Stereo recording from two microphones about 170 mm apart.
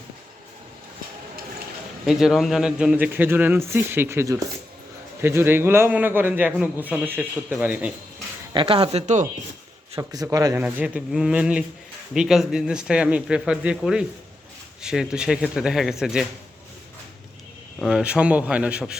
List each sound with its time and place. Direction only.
2.0 s a man's voice: centre (ahead or behind)
8.5 s speech: 30° right (ahead or behind)
9.9 s speech: 20° right (ahead or behind); by 16.2 s 5° right (ahead or behind)
17.7 s a man's voice: centre (ahead or behind)